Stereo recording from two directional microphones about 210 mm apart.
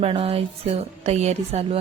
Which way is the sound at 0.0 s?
30° right (ahead or behind).